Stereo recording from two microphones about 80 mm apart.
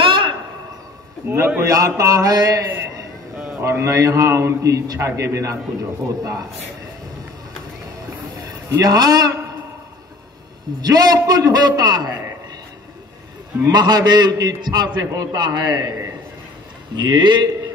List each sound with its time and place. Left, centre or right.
0.0 s a sound: right
1.2 s a man's voice: right
1.6 s mantra: right
3.6 s a man's voice: right
8.4 s a man's voice: right
10.8 s a man's voice: right
13.7 s a man's voice: right
15.0 s mantra: right
16.9 s a man's voice: right